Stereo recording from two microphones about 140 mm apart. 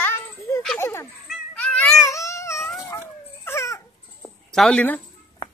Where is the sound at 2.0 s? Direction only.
20° left (ahead or behind).